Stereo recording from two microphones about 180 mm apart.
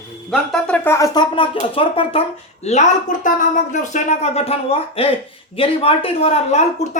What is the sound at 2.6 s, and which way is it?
A woman's voice, 40° left (ahead or behind).